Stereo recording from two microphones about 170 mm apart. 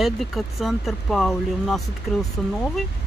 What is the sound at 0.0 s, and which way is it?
Speech, centre (ahead or behind).